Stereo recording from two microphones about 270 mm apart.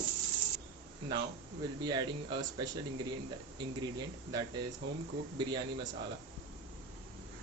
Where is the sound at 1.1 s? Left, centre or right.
Centre.